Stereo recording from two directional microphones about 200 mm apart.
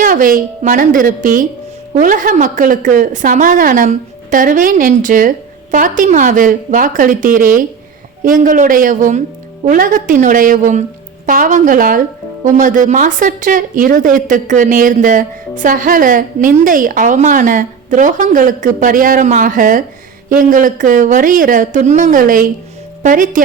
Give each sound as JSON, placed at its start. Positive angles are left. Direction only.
{"t": 0.0, "sound": "speech", "side_deg": -45}